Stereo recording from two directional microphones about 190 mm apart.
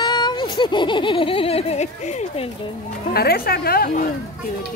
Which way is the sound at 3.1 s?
55° left (ahead or behind).